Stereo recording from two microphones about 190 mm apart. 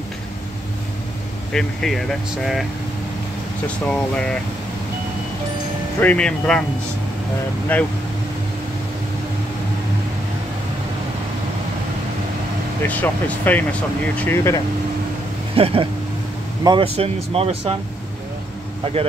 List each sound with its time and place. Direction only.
1.5 s speech: 5° left (ahead or behind)
3.6 s speech: 5° left (ahead or behind)
5.9 s speech: 5° left (ahead or behind)
7.7 s speech: 10° left (ahead or behind)
12.8 s speech: 10° left (ahead or behind)
15.5 s speech: 30° right (ahead or behind)